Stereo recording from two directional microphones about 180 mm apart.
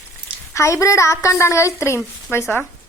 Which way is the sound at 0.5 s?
15° left (ahead or behind).